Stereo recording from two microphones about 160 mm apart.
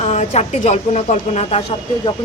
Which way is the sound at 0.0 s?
45° left (ahead or behind).